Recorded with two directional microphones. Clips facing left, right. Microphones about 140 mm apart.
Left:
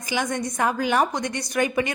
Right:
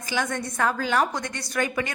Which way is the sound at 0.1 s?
15° left (ahead or behind).